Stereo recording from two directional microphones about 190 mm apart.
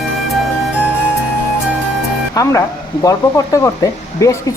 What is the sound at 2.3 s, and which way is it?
A woman's voice, 20° left (ahead or behind).